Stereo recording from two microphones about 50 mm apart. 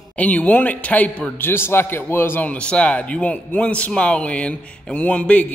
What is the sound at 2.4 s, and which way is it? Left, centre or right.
A man's voice, left.